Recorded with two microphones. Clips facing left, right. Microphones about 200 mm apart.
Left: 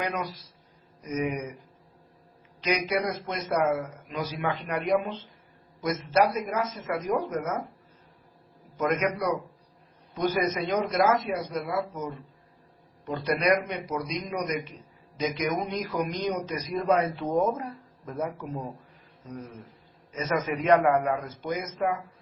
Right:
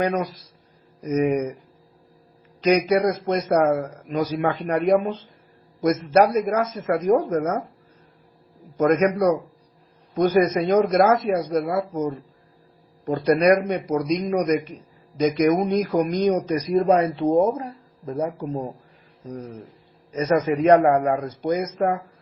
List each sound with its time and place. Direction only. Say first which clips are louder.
1.0 s a man's voice: right 9 dB; 45° right (ahead or behind)
2.6 s a man's voice: right 9 dB; 45° right (ahead or behind)
8.8 s a man's voice: right 8 dB; 45° right (ahead or behind)
16.9 s a man's voice: right 4 dB; 30° right (ahead or behind)
20.1 s a man's voice: right 8 dB; 40° right (ahead or behind)